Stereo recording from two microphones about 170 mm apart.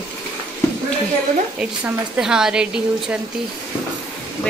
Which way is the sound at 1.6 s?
5° right (ahead or behind).